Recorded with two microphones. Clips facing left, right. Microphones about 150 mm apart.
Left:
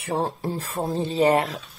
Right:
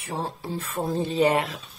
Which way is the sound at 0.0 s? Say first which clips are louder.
Left 6 dB; 60° left (ahead or behind).